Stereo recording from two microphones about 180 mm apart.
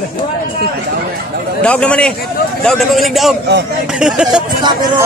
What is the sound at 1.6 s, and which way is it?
A man's voice, 5° left (ahead or behind).